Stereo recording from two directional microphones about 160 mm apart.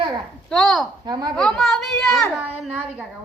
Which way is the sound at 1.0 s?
25° right (ahead or behind).